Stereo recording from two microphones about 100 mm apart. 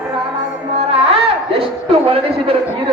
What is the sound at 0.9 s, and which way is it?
A man's voice, 75° right (ahead or behind).